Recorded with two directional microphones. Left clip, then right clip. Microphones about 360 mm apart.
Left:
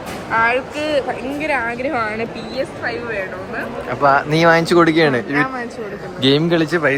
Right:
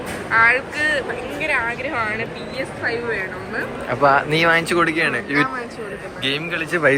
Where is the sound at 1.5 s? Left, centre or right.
Left.